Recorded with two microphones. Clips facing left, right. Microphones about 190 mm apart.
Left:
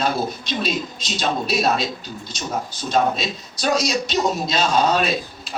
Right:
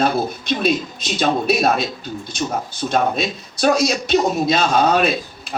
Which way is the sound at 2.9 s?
55° right (ahead or behind).